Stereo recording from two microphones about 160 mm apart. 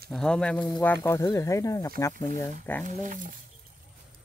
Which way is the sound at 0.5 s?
25° left (ahead or behind).